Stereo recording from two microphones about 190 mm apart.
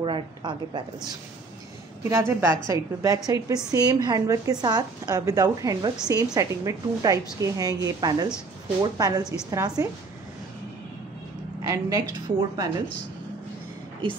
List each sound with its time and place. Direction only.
0.0 s speech: 25° right (ahead or behind)
2.0 s a woman's voice: 15° right (ahead or behind)
11.6 s speech: 20° right (ahead or behind)